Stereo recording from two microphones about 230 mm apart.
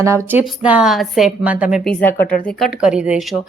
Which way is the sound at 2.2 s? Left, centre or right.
Left.